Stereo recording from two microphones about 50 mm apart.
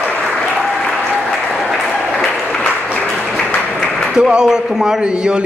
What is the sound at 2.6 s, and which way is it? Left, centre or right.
Applause, left.